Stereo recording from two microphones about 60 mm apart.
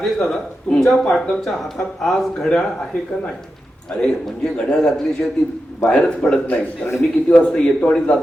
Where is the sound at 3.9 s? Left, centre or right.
Centre.